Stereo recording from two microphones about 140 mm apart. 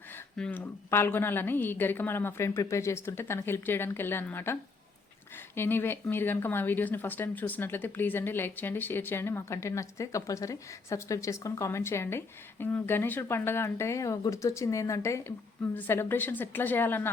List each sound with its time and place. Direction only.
0.3 s speech: 10° left (ahead or behind)
5.5 s speech: 15° left (ahead or behind)